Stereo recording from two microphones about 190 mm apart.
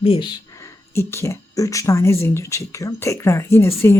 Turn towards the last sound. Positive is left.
turn(degrees=15)  # may be behind; listen again after turning